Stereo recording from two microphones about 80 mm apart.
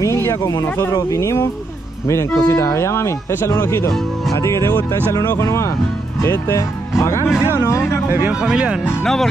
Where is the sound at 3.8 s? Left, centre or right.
Left.